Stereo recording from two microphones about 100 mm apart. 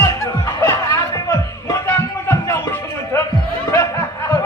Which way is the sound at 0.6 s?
30° left (ahead or behind).